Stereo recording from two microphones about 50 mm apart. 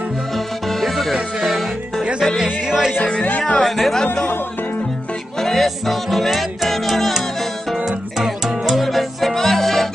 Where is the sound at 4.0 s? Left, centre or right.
Centre.